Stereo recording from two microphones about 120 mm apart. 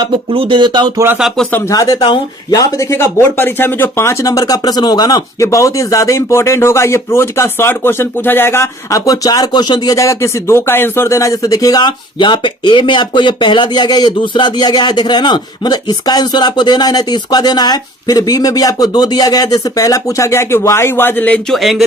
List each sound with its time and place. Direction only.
0.0 s speech: 45° right (ahead or behind)
0.9 s speech: 20° right (ahead or behind)
1.5 s speech: 15° left (ahead or behind)
1.7 s speech: 30° left (ahead or behind); by 21.4 s 15° left (ahead or behind)
21.5 s a sound: centre (ahead or behind)